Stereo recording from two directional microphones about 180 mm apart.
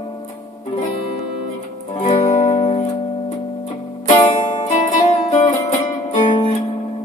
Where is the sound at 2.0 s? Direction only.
40° left (ahead or behind).